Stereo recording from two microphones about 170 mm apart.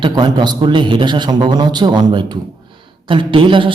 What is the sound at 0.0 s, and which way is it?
Speech, 25° right (ahead or behind).